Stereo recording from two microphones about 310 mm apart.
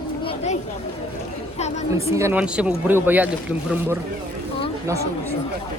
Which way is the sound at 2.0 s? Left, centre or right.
Centre.